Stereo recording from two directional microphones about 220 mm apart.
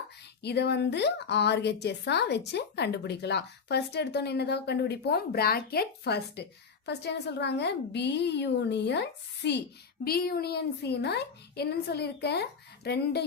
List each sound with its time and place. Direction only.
0.4 s a woman's voice: 50° left (ahead or behind)